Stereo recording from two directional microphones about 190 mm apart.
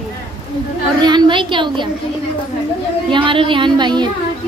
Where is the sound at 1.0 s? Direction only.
25° right (ahead or behind).